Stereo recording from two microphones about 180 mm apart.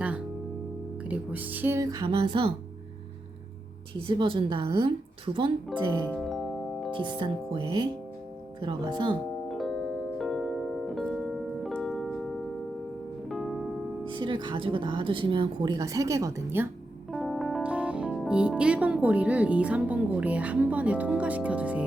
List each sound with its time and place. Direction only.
1.0 s speech: 10° right (ahead or behind); by 2.5 s 30° right (ahead or behind)
4.0 s speech: 25° right (ahead or behind)
5.7 s speech: centre (ahead or behind)
6.1 s music: centre (ahead or behind)
6.9 s speech: 25° right (ahead or behind)
9.5 s music: centre (ahead or behind)
14.1 s speech: 25° right (ahead or behind)
17.1 s speech: centre (ahead or behind)